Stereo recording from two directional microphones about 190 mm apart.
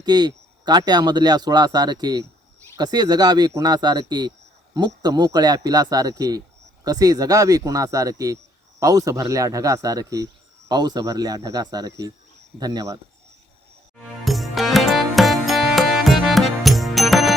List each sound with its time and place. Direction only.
0.0 s speech: 20° right (ahead or behind)
14.3 s music: centre (ahead or behind)